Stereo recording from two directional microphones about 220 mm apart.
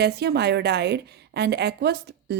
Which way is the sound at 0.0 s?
50° right (ahead or behind).